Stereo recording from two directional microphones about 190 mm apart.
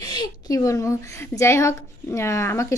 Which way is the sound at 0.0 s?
20° left (ahead or behind).